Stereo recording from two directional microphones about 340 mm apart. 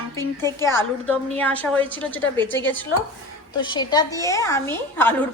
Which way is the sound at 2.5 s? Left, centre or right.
Left.